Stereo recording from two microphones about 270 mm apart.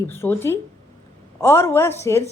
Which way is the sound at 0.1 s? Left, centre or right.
Centre.